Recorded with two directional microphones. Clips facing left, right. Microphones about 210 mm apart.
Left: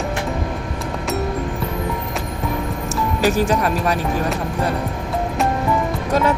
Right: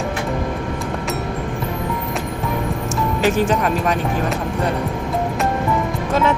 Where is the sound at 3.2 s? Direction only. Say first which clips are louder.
Even; 40° left (ahead or behind).